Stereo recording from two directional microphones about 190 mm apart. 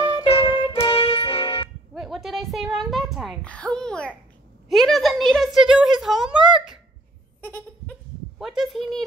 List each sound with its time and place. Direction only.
0.0 s music: 25° left (ahead or behind)
2.0 s a woman's voice: centre (ahead or behind)
7.4 s goat: 10° left (ahead or behind)
8.4 s a woman's voice: centre (ahead or behind)